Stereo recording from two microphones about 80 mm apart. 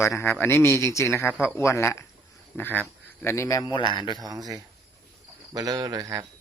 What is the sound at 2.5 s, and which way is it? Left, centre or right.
Speech, left.